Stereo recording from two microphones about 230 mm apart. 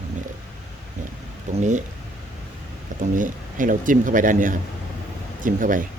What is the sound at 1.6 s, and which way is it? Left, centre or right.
Speech, right.